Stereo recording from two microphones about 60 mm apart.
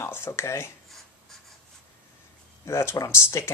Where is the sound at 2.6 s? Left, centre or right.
Left.